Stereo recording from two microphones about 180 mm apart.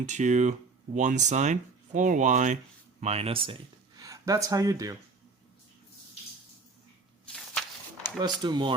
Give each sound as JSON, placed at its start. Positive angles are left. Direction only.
{"t": 0.0, "sound": "speech", "side_deg": -40}
{"t": 7.3, "sound": "a sound", "side_deg": 5}
{"t": 8.2, "sound": "speech", "side_deg": -25}